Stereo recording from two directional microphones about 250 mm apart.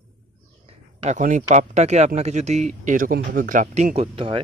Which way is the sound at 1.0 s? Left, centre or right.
Right.